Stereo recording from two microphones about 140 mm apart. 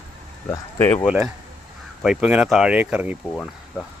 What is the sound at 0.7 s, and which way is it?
Speech, 20° left (ahead or behind).